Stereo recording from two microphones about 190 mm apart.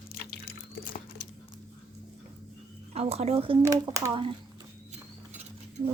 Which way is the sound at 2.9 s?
35° right (ahead or behind).